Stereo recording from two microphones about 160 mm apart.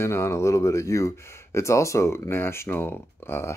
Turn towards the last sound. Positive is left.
turn(degrees=15)  # may be behind; listen again after turning